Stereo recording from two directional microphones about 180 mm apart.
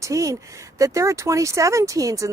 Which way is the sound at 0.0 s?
15° right (ahead or behind).